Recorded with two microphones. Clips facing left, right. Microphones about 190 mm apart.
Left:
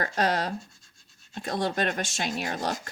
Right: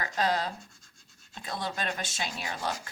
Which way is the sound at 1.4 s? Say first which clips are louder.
Left 7 dB; 50° left (ahead or behind).